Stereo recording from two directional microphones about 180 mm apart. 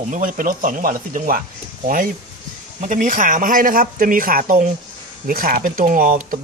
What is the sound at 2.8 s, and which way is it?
Speech, 45° right (ahead or behind).